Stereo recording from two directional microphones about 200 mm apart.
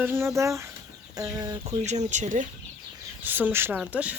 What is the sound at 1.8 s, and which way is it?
Speech, 35° right (ahead or behind).